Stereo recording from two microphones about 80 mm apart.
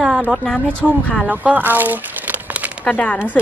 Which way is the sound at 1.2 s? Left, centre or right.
Centre.